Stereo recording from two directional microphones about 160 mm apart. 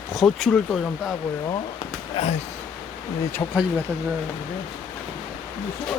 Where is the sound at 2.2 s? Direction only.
35° left (ahead or behind).